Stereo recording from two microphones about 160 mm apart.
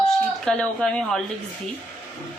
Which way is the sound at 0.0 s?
5° left (ahead or behind).